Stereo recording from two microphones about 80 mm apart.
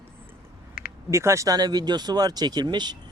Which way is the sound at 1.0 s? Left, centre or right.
Right.